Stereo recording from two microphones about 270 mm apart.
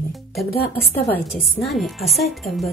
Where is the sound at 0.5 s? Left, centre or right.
Left.